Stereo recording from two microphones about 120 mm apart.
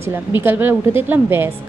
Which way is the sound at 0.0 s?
20° right (ahead or behind).